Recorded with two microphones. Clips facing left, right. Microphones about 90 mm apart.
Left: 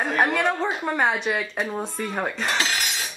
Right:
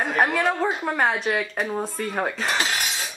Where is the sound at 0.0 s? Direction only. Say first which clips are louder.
Even; centre (ahead or behind).